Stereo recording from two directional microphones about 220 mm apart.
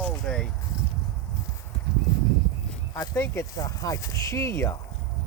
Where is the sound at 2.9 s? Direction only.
15° left (ahead or behind).